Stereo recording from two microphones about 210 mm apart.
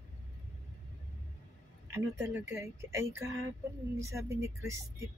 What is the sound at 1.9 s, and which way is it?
Speech, 10° right (ahead or behind).